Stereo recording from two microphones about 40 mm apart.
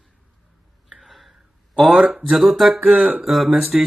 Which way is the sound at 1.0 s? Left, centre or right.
Centre.